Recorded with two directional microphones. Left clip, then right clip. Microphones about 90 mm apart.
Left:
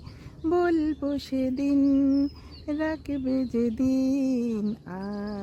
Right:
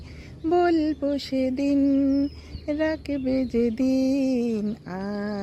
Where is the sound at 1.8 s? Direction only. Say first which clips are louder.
Even; 40° left (ahead or behind).